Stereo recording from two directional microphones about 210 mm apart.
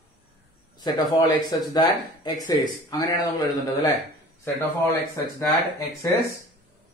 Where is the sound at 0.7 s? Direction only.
20° left (ahead or behind).